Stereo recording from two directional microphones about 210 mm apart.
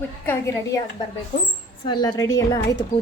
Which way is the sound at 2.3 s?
65° left (ahead or behind).